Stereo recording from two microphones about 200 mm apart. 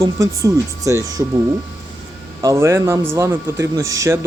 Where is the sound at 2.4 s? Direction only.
15° right (ahead or behind).